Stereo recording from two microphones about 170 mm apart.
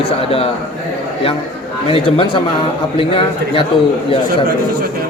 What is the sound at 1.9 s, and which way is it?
A man's voice, 30° left (ahead or behind).